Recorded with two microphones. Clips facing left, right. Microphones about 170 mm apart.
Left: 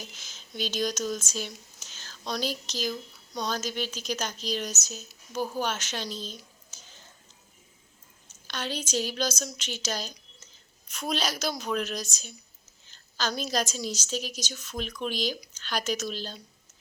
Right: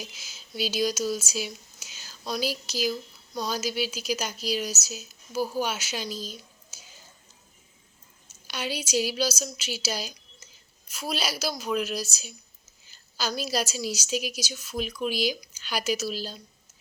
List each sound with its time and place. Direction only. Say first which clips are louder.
0.0 s speech: right 2 dB; 10° right (ahead or behind)
8.3 s a woman's voice: right 1 dB; 10° right (ahead or behind)